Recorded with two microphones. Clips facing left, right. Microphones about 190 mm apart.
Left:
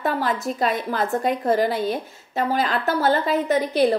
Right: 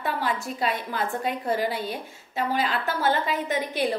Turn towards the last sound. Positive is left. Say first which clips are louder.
# left 7 dB
turn(degrees=40)  # may be behind; listen again after turning